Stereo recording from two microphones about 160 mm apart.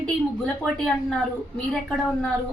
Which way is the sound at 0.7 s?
Centre (ahead or behind).